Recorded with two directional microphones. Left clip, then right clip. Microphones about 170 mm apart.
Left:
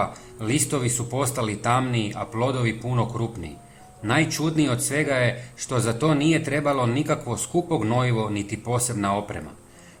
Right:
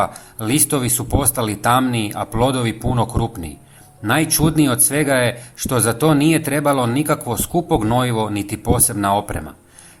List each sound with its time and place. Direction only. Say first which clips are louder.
0.0 s speech: right 6 dB; 40° right (ahead or behind)